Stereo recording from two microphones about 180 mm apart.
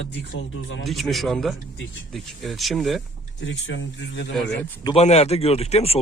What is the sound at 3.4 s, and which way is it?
Speech, 85° left.